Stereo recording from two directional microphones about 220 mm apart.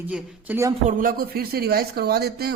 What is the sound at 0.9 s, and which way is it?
Speech, 40° right (ahead or behind).